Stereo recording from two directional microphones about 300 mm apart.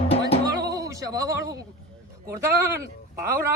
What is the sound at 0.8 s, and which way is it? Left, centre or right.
A man's voice, centre.